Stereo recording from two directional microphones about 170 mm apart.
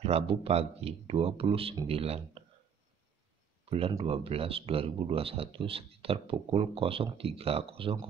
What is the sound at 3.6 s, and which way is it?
Speech, 35° right (ahead or behind).